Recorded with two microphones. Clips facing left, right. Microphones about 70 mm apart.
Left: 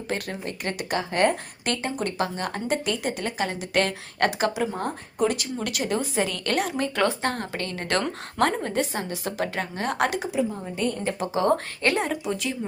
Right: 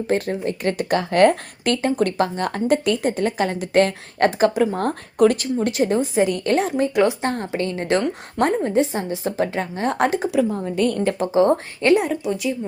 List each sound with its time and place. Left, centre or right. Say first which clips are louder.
0.1 s speech: right 8 dB; right
5.4 s a woman's voice: right 9 dB; right
10.3 s a woman's voice: right 7 dB; right
11.3 s a woman's voice: right 5 dB; right
11.9 s speech: right 5 dB; centre